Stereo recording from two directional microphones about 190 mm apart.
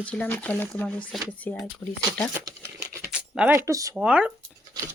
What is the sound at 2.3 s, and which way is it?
Crumpling, 15° right (ahead or behind).